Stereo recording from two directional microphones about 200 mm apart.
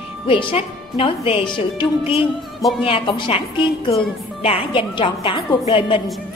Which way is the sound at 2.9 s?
25° left (ahead or behind).